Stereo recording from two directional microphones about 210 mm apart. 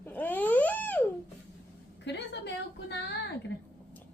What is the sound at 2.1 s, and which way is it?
A woman's voice, 55° left (ahead or behind).